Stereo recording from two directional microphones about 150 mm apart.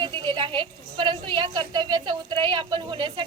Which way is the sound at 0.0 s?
30° right (ahead or behind).